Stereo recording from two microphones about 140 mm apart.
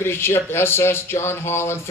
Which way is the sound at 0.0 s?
15° left (ahead or behind).